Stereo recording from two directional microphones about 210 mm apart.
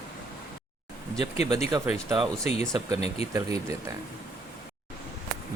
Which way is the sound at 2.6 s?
15° right (ahead or behind).